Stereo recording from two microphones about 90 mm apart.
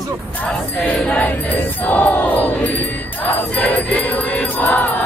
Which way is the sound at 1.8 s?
20° left (ahead or behind).